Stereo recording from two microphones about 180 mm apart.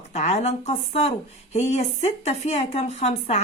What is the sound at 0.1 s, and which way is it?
Speech, 40° left (ahead or behind).